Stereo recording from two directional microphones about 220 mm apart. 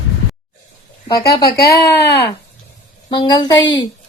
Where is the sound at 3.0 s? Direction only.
20° left (ahead or behind).